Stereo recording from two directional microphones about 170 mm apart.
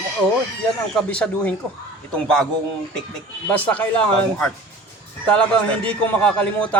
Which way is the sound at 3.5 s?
10° left (ahead or behind).